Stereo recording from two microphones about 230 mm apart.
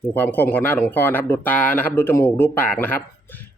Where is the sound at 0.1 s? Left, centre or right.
Centre.